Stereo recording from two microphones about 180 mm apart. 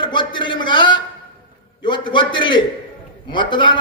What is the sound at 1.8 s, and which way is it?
A man's voice, 25° left (ahead or behind).